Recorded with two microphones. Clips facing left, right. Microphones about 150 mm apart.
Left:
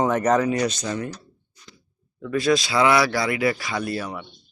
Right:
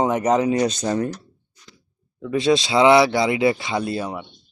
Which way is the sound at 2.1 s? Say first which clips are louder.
Right 2 dB; 20° right (ahead or behind).